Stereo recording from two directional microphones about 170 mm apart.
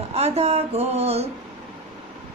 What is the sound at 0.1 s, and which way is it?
A woman's voice, 40° right (ahead or behind).